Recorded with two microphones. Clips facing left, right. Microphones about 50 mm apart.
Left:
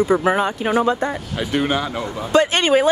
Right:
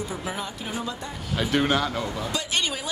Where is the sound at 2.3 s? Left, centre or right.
Left.